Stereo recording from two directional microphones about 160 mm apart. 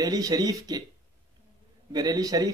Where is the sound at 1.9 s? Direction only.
25° right (ahead or behind).